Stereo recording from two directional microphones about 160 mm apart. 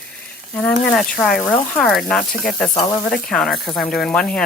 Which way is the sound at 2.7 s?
25° left (ahead or behind).